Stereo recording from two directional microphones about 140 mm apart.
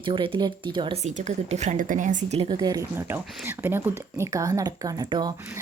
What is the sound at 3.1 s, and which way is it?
Speech, 15° right (ahead or behind).